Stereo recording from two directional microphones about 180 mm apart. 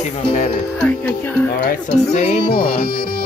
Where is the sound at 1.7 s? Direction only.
55° left (ahead or behind).